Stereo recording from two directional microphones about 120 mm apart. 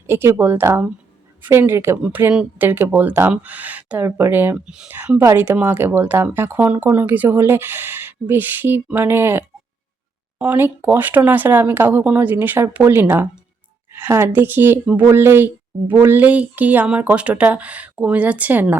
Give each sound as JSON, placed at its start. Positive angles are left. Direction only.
{"t": 0.1, "sound": "a woman's voice", "side_deg": -20}
{"t": 4.6, "sound": "speech", "side_deg": -5}